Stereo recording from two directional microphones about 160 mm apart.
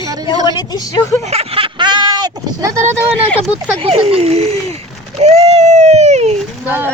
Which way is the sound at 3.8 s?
40° right (ahead or behind).